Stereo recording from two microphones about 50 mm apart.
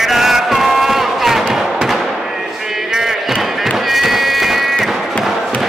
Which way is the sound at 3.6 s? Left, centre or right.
Centre.